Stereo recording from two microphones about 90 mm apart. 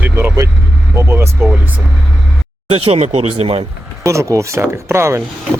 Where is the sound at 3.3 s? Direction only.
90° right.